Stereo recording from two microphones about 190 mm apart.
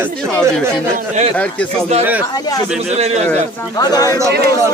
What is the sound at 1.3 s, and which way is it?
Speech, 5° left (ahead or behind).